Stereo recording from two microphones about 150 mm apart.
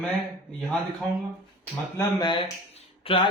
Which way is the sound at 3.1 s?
40° left (ahead or behind).